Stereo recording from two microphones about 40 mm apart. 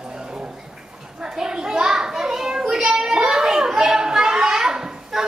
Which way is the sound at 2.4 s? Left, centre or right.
Centre.